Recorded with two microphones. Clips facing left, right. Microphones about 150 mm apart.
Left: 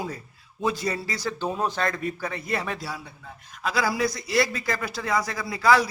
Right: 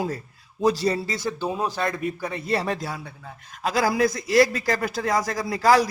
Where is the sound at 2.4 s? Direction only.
35° right (ahead or behind).